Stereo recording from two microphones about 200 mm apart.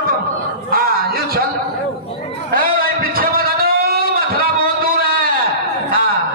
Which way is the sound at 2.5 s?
45° right (ahead or behind).